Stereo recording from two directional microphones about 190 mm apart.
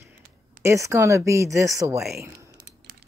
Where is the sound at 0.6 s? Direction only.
15° right (ahead or behind).